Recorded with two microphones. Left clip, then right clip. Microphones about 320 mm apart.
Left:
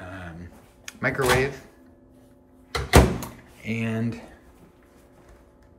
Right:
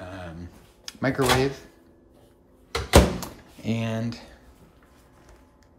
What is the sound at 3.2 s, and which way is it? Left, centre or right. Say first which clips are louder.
Drawer open or close: right 1 dB; centre.